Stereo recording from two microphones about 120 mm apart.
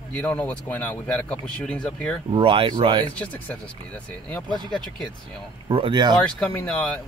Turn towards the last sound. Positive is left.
turn(degrees=10)  # may be behind; listen again after turning